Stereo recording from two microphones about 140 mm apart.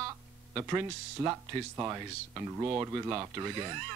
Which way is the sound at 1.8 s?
20° right (ahead or behind).